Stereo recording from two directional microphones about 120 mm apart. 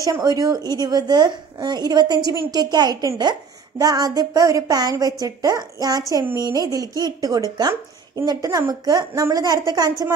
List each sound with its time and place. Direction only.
0.0 s a woman's voice: 30° right (ahead or behind)